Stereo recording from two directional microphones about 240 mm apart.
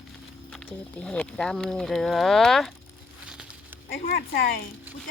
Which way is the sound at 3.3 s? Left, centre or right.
Centre.